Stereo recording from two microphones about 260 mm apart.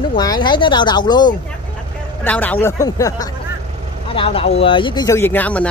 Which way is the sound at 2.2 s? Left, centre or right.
Centre.